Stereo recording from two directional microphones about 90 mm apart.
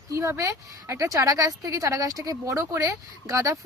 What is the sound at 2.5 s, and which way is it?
Speech, 30° right (ahead or behind).